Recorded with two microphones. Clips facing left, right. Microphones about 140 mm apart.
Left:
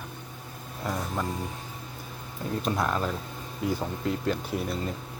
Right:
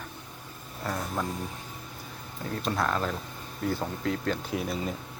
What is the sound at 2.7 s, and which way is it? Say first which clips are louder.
Speech: right 2 dB; 10° left (ahead or behind).